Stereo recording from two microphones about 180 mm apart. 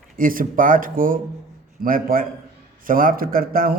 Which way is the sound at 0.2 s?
50° right (ahead or behind).